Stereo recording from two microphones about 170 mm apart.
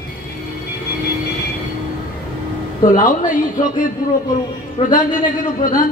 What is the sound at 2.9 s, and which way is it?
A man's voice, 50° left (ahead or behind).